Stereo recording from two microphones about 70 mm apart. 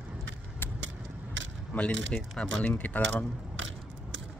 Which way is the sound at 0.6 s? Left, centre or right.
Left.